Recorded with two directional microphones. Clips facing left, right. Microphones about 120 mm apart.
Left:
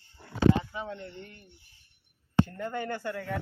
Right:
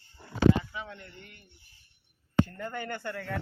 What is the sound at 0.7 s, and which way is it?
Speech, 35° left (ahead or behind).